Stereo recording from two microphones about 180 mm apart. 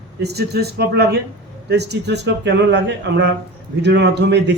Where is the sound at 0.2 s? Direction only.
65° right (ahead or behind).